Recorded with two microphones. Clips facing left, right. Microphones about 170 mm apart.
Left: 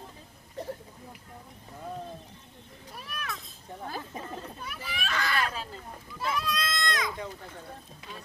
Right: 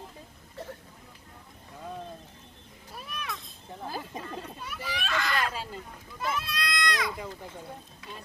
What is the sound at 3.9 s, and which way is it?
Speech, 10° right (ahead or behind).